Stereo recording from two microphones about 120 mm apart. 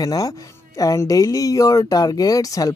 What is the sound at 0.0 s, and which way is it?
Speech, 30° left (ahead or behind).